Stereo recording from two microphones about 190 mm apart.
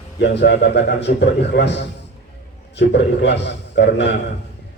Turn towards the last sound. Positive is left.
turn(degrees=65)  # may be behind; listen again after turning